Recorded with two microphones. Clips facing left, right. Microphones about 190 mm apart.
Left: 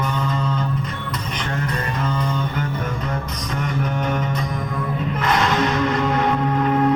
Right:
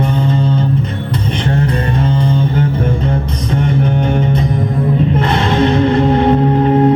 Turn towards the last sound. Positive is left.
turn(degrees=-30)  # may be behind; listen again after turning